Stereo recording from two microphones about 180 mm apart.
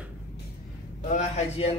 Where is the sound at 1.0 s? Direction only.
40° left (ahead or behind).